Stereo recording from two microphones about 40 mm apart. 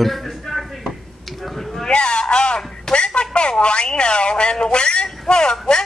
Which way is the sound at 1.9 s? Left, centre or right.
Left.